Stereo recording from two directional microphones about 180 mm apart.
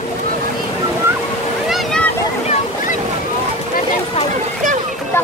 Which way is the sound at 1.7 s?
5° left (ahead or behind).